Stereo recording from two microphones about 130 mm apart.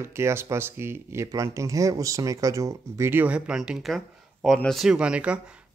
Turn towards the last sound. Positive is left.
turn(degrees=-10)  # may be behind; listen again after turning